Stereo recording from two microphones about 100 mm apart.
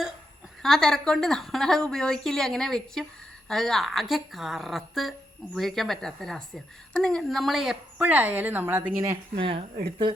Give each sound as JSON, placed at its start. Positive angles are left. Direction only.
{"t": 0.6, "sound": "a woman's voice", "side_deg": 5}
{"t": 8.0, "sound": "a woman's voice", "side_deg": -15}
{"t": 9.4, "sound": "speech", "side_deg": -65}